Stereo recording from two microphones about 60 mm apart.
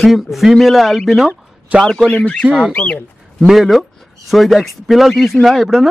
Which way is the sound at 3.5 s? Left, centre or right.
Centre.